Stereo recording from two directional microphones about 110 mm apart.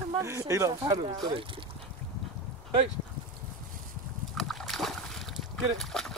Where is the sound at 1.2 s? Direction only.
50° right (ahead or behind).